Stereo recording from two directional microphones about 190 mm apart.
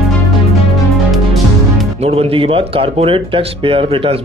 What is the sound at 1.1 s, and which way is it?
Music, centre (ahead or behind).